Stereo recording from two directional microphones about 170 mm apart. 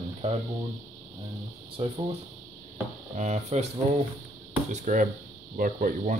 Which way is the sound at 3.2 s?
40° right (ahead or behind).